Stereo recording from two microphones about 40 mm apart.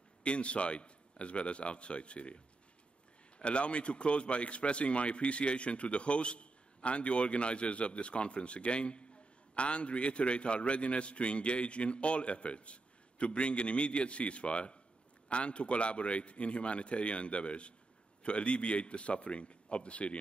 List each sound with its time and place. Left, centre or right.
0.2 s a man's voice: left
3.3 s a man's voice: left